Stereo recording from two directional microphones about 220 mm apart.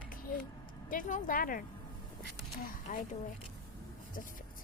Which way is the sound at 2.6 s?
40° left (ahead or behind).